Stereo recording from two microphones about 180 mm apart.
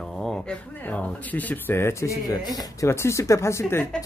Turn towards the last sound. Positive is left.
turn(degrees=15)  # may be behind; listen again after turning